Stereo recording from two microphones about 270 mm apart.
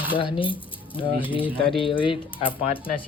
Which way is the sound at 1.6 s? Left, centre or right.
Centre.